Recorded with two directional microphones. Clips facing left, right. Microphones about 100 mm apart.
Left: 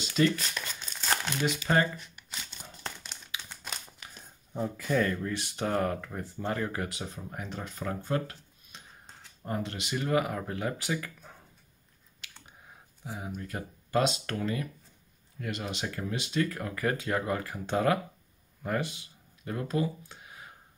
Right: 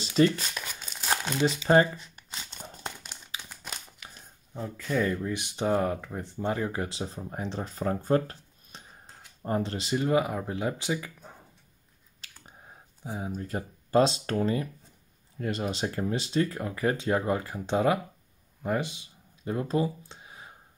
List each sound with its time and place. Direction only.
0.0 s speech: 30° right (ahead or behind)
0.7 s crumpling: 10° right (ahead or behind)
1.4 s crumpling: 30° right (ahead or behind)
2.8 s crumpling: 10° right (ahead or behind)
4.6 s speech: 5° left (ahead or behind)
4.9 s speech: 10° right (ahead or behind)
12.2 s a sound: 35° right (ahead or behind)
13.0 s speech: 30° right (ahead or behind)
18.6 s a sound: 20° right (ahead or behind)